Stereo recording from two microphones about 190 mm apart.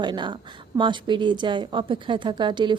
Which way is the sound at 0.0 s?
25° right (ahead or behind).